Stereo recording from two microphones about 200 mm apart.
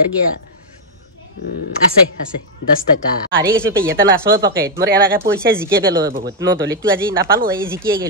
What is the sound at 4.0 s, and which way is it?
Speech, 55° right (ahead or behind).